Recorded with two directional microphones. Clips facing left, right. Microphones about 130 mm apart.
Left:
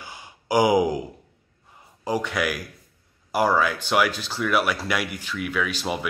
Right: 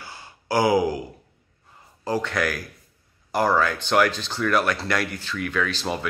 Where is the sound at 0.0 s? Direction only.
15° left (ahead or behind).